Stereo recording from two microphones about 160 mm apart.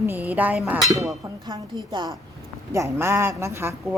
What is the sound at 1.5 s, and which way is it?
A woman's voice, 25° right (ahead or behind).